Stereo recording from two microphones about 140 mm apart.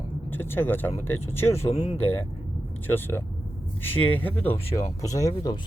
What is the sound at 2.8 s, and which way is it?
Speech, 15° left (ahead or behind).